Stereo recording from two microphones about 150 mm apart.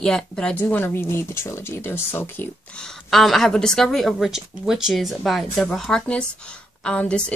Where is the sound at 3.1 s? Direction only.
Centre (ahead or behind).